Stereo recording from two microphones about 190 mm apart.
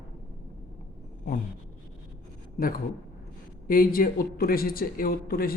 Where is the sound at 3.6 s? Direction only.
50° left (ahead or behind).